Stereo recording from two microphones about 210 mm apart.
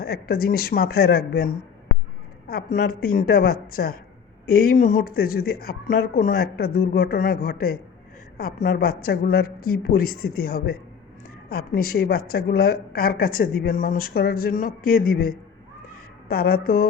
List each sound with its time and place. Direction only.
0.0 s a woman's voice: 45° left (ahead or behind)